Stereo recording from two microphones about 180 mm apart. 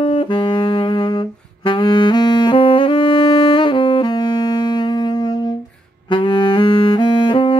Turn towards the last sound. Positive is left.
turn(degrees=30)  # may be behind; listen again after turning